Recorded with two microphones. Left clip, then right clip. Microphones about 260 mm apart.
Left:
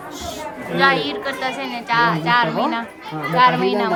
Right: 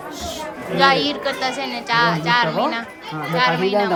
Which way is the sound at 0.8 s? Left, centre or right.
Centre.